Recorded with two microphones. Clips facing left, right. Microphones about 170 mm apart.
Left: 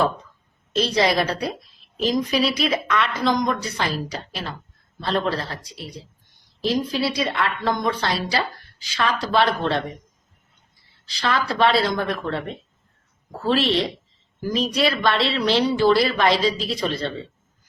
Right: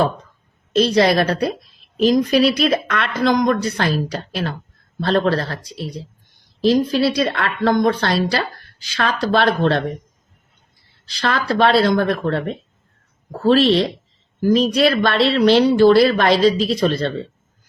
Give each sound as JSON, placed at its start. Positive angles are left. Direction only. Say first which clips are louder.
{"t": 0.8, "sound": "speech", "louder": "right 5 dB", "side_deg": -55}
{"t": 2.0, "sound": "speech", "louder": "right 6 dB", "side_deg": -65}
{"t": 6.6, "sound": "speech", "louder": "right 7 dB", "side_deg": -70}
{"t": 11.2, "sound": "speech", "louder": "right 3 dB", "side_deg": -60}
{"t": 12.1, "sound": "speech", "louder": "right 6 dB", "side_deg": -45}
{"t": 14.4, "sound": "speech", "louder": "right 7 dB", "side_deg": -60}